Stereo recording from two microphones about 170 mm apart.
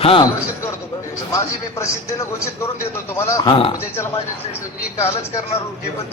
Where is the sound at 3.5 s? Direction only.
30° left (ahead or behind).